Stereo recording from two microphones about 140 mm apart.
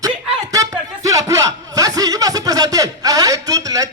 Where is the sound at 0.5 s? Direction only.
25° right (ahead or behind).